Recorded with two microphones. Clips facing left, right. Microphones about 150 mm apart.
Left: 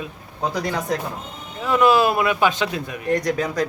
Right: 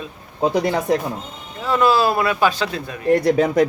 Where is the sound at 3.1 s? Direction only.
30° right (ahead or behind).